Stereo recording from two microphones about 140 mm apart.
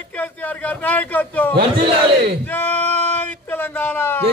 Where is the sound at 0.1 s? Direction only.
10° left (ahead or behind).